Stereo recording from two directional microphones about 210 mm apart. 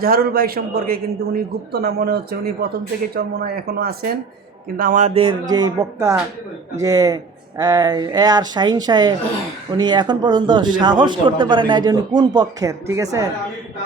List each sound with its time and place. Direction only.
0.0 s a man's voice: 45° right (ahead or behind); by 13.3 s 15° right (ahead or behind)